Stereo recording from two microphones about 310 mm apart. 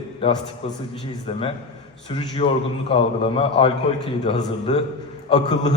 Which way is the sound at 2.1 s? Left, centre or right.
Centre.